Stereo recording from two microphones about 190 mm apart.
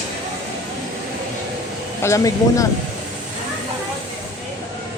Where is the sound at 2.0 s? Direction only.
15° left (ahead or behind).